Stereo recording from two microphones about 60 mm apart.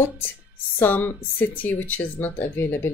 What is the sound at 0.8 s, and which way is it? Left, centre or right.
Speech, left.